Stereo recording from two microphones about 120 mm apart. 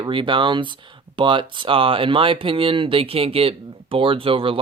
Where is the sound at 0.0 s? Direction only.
45° right (ahead or behind).